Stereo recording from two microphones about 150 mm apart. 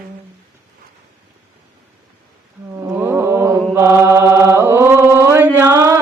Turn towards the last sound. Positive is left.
turn(degrees=-20)  # may be behind; listen again after turning